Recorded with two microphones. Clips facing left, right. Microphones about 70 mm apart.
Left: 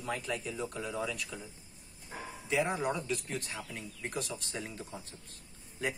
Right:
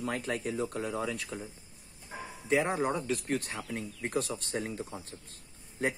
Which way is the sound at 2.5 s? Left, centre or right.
Right.